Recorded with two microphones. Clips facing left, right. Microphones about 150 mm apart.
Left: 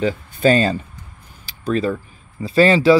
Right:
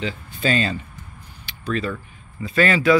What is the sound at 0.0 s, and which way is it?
Speech, 45° left (ahead or behind).